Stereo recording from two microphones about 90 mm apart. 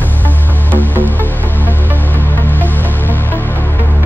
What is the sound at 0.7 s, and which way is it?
Music, 20° left (ahead or behind).